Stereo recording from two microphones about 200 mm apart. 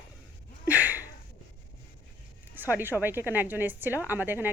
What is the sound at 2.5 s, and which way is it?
A woman's voice, 10° right (ahead or behind).